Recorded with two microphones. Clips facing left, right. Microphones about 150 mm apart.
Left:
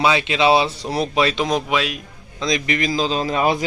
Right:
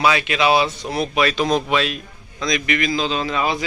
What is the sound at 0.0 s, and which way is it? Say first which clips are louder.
Speech: left 1 dB; 25° left (ahead or behind).